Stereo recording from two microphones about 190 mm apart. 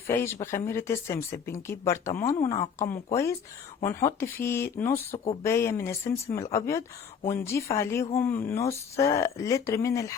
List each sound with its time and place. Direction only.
0.1 s speech: 15° left (ahead or behind)
5.1 s speech: 35° left (ahead or behind)
5.4 s speech: 15° left (ahead or behind)